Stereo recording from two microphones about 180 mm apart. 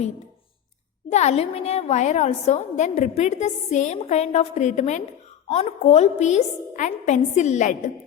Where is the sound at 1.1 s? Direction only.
35° left (ahead or behind).